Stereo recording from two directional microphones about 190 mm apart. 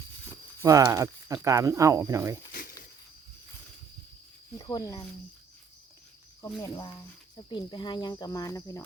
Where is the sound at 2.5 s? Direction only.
50° left (ahead or behind).